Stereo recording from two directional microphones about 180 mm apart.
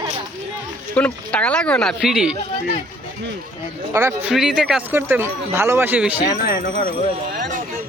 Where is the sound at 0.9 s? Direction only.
5° left (ahead or behind).